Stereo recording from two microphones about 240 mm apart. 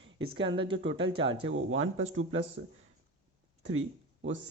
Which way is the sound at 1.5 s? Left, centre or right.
Right.